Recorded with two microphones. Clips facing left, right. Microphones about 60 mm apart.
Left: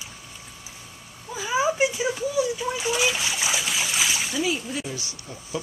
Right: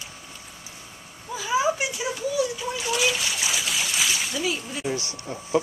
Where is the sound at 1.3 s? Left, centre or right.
Centre.